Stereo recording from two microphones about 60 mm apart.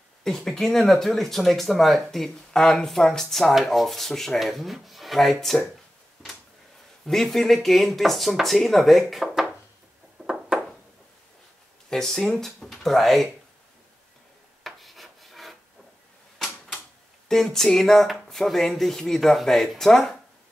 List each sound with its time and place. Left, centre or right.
0.2 s speech: centre
6.2 s a sound: centre
7.1 s speech: centre
10.2 s a sound: centre
11.9 s speech: centre
14.6 s rub: centre
16.3 s typewriter: centre
17.3 s speech: centre